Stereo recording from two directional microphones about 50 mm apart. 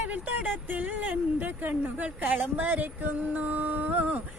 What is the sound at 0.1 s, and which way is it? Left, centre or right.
Speech, right.